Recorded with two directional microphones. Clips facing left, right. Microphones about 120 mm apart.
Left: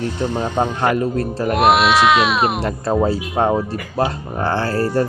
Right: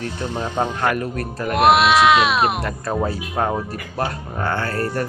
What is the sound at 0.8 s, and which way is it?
Speech, 25° left (ahead or behind).